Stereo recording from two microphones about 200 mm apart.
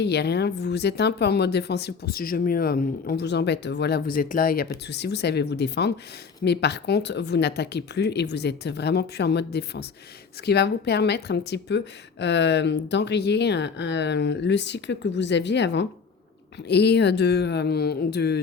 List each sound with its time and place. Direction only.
0.0 s speech: 55° left (ahead or behind)
4.9 s speech: 55° left (ahead or behind)